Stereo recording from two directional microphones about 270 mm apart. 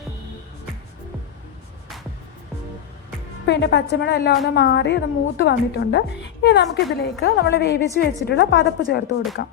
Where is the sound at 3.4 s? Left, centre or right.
Left.